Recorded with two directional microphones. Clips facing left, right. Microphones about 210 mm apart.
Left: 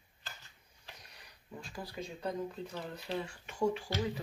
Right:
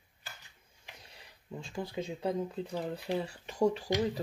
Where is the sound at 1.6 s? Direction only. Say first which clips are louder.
Right 6 dB; 25° right (ahead or behind).